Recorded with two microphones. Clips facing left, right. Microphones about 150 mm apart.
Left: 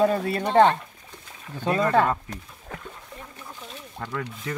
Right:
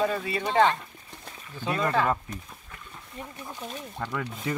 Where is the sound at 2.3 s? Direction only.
70° left (ahead or behind).